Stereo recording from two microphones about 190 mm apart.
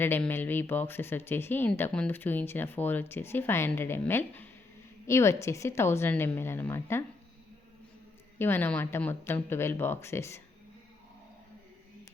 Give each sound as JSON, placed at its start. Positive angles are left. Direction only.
{"t": 0.0, "sound": "speech", "side_deg": 10}
{"t": 8.4, "sound": "speech", "side_deg": 10}